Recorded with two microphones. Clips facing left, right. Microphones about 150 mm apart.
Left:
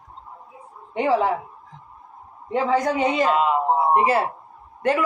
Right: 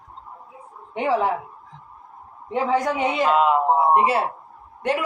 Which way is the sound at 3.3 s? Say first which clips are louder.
Right 2 dB; centre (ahead or behind).